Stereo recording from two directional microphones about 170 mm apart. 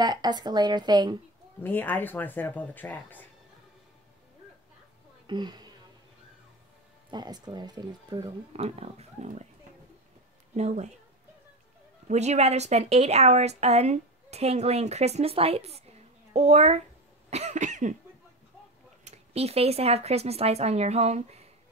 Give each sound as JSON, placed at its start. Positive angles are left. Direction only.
{"t": 0.0, "sound": "speech", "side_deg": -25}
{"t": 1.6, "sound": "speech", "side_deg": 10}
{"t": 5.2, "sound": "speech", "side_deg": -25}
{"t": 7.1, "sound": "speech", "side_deg": -25}
{"t": 8.5, "sound": "speech", "side_deg": -35}
{"t": 10.5, "sound": "speech", "side_deg": -40}
{"t": 12.1, "sound": "speech", "side_deg": -40}
{"t": 17.3, "sound": "cough", "side_deg": -40}
{"t": 19.0, "sound": "speech", "side_deg": -35}